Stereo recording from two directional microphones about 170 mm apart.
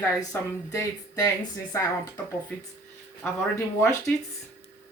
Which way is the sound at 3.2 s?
15° left (ahead or behind).